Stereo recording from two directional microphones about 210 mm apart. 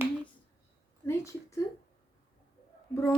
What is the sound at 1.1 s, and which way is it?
Hands, 15° left (ahead or behind).